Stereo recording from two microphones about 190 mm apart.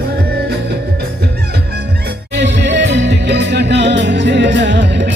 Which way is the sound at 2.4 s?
65° right (ahead or behind).